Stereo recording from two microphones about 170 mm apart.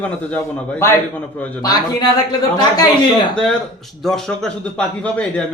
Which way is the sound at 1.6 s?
20° left (ahead or behind).